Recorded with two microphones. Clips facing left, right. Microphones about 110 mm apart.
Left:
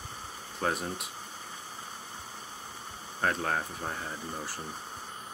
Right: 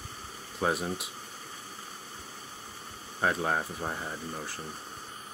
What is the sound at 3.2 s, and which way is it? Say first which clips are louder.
Speech: right 2 dB; 10° right (ahead or behind).